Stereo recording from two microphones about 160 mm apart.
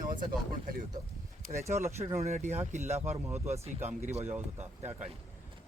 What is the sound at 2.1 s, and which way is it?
Speech, 45° right (ahead or behind).